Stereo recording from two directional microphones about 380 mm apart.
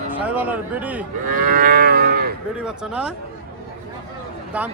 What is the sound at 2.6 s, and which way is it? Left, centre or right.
Cattle, centre.